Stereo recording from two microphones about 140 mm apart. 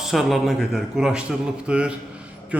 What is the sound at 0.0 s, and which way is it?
A man's voice, centre (ahead or behind).